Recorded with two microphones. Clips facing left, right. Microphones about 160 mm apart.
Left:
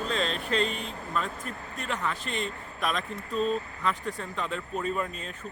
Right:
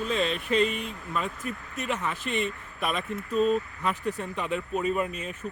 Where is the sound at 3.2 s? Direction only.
30° left (ahead or behind).